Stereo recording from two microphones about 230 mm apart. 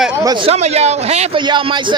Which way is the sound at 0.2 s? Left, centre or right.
Centre.